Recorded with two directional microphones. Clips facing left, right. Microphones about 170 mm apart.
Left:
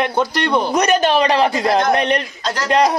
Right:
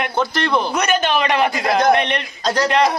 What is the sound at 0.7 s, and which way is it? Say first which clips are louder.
Speech: left 4 dB; 35° left (ahead or behind).